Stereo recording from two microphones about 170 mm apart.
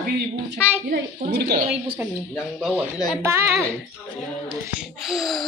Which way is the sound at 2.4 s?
Centre (ahead or behind).